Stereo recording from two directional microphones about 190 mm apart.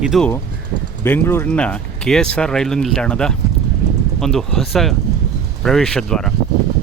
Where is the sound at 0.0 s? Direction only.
Centre (ahead or behind).